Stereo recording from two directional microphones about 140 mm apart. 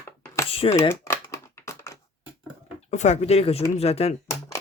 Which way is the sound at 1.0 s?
20° left (ahead or behind).